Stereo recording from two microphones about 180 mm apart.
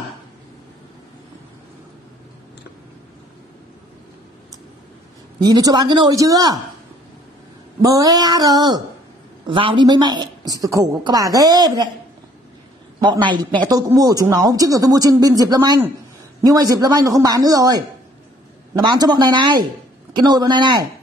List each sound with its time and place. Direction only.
5.4 s a woman's voice: 20° right (ahead or behind)
7.8 s a woman's voice: 20° right (ahead or behind)
13.7 s a woman's voice: 20° right (ahead or behind)